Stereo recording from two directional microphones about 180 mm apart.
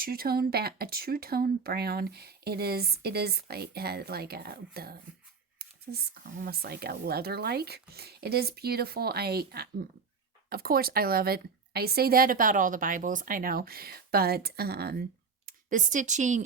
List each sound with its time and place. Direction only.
0.0 s speech: 55° right (ahead or behind)
15.4 s speech: 45° right (ahead or behind)